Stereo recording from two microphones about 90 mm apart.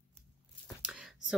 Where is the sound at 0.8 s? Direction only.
10° right (ahead or behind).